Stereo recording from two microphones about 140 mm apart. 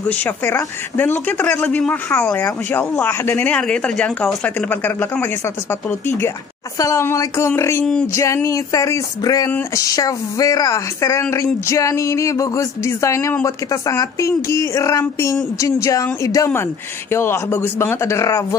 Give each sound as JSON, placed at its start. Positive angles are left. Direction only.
{"t": 0.1, "sound": "speech", "side_deg": 15}